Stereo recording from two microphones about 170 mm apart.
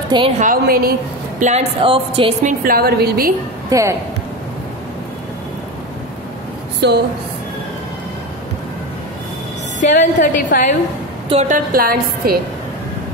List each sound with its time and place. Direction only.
0.4 s a woman's voice: 55° right (ahead or behind)
1.4 s a woman's voice: 40° right (ahead or behind)
2.4 s a woman's voice: 60° right (ahead or behind)
3.7 s speech: 20° right (ahead or behind)
6.8 s speech: 90° right
9.8 s a woman's voice: 50° left (ahead or behind)
11.2 s a woman's voice: 35° right (ahead or behind)
11.5 s a woman's voice: 60° right (ahead or behind)